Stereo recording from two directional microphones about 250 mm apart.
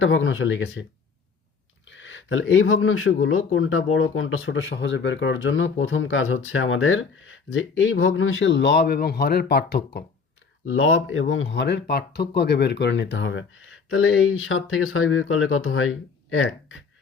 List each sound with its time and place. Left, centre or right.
0.0 s speech: left
1.9 s speech: left
10.7 s speech: left